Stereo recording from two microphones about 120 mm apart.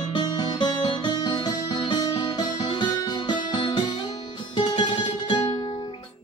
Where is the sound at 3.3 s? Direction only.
40° left (ahead or behind).